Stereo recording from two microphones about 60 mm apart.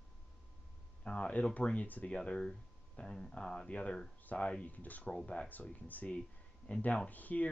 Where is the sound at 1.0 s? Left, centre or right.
Centre.